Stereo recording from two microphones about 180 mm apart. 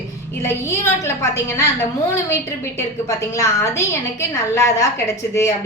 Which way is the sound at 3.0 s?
15° left (ahead or behind).